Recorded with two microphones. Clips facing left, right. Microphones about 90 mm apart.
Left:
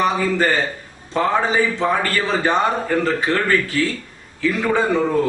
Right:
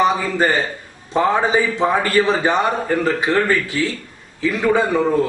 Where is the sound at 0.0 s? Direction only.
15° right (ahead or behind).